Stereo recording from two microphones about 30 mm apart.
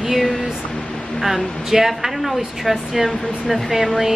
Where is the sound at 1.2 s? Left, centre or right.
Centre.